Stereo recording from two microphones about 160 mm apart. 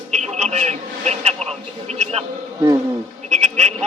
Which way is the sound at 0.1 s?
45° right (ahead or behind).